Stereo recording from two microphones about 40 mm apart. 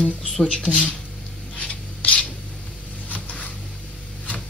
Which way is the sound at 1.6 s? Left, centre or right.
Left.